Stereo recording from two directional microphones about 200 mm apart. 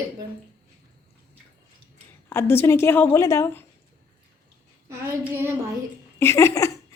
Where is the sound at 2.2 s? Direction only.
10° left (ahead or behind).